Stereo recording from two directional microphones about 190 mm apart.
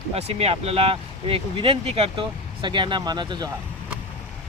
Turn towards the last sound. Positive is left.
turn(degrees=-25)  # may be behind; listen again after turning